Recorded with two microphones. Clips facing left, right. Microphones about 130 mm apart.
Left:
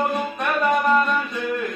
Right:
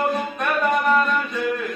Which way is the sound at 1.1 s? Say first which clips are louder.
Right 1 dB; centre (ahead or behind).